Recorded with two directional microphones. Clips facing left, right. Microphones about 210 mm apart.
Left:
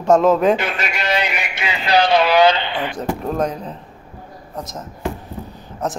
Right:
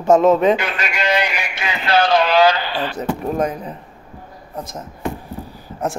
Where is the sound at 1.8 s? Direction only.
15° left (ahead or behind).